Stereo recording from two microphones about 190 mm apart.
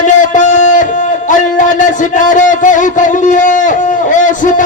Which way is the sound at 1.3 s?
40° left (ahead or behind).